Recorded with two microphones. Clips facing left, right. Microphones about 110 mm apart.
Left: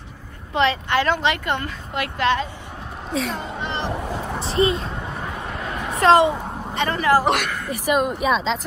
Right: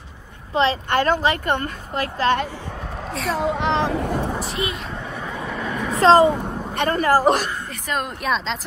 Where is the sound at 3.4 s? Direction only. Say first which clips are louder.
Right 7 dB; 90° right.